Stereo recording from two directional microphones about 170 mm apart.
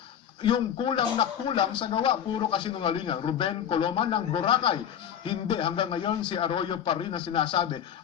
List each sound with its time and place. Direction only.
0.4 s speech: 30° left (ahead or behind)